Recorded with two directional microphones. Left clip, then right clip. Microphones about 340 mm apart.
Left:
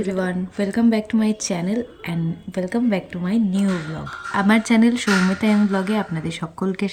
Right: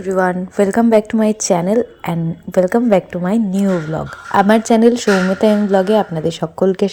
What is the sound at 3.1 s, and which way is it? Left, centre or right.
A woman's voice, centre.